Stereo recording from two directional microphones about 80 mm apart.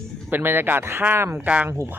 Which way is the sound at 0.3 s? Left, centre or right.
Right.